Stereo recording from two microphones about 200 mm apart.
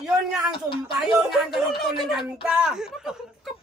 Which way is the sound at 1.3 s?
Centre (ahead or behind).